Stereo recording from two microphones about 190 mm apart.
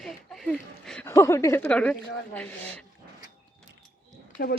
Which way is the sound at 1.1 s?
15° left (ahead or behind).